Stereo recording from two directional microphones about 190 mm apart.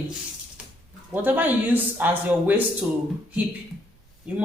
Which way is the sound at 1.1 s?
10° right (ahead or behind).